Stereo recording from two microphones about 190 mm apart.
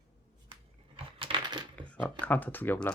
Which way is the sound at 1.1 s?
25° right (ahead or behind).